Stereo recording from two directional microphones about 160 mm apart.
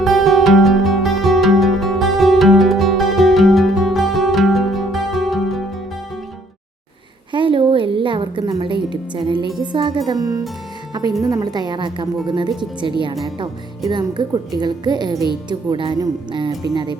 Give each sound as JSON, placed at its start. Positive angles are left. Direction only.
{"t": 0.0, "sound": "music", "side_deg": 0}
{"t": 7.3, "sound": "music", "side_deg": -30}
{"t": 9.6, "sound": "speech", "side_deg": -30}
{"t": 13.9, "sound": "speech", "side_deg": -30}